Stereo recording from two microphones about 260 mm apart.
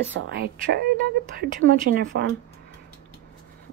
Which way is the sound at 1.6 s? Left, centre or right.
Right.